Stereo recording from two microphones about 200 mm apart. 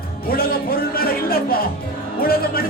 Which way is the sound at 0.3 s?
50° left (ahead or behind).